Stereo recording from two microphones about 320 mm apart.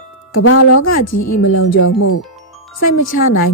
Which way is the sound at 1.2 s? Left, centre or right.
Left.